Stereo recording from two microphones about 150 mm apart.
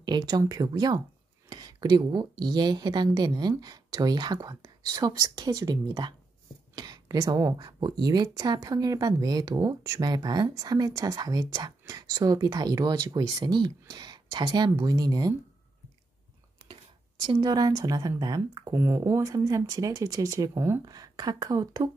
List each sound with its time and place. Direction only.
0.0 s speech: 30° right (ahead or behind)
17.2 s speech: 30° right (ahead or behind)